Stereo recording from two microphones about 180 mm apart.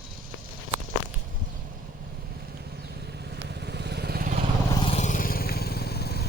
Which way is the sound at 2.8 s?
65° right (ahead or behind).